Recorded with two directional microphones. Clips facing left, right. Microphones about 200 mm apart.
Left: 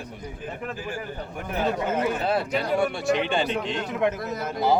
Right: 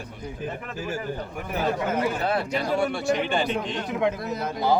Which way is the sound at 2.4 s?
Centre (ahead or behind).